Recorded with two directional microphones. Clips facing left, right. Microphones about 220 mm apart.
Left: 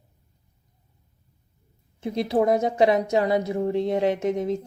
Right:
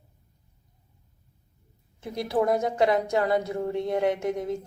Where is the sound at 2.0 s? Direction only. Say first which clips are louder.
Left 4 dB; 25° left (ahead or behind).